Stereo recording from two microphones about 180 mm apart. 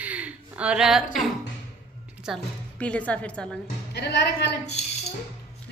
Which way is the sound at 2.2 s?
5° left (ahead or behind).